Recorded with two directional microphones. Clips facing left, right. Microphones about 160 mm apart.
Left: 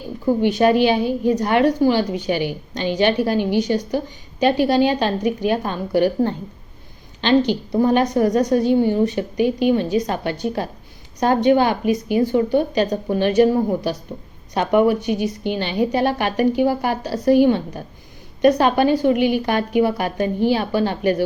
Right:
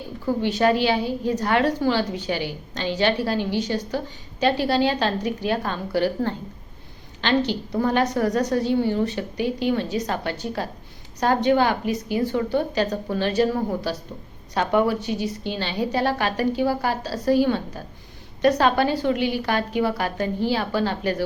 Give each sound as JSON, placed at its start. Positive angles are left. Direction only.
{"t": 0.3, "sound": "a woman's voice", "side_deg": 15}